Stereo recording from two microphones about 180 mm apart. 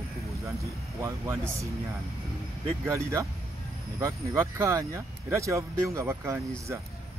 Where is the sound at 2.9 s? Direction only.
15° right (ahead or behind).